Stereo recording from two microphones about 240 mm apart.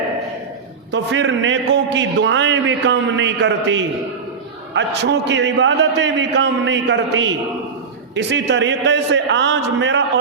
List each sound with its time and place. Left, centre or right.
0.9 s a man's voice: right